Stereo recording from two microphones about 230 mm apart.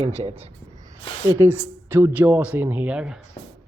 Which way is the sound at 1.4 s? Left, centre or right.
Centre.